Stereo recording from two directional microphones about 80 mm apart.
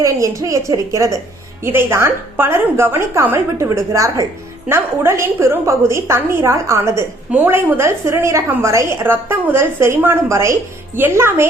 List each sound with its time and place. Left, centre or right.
0.0 s a woman's voice: right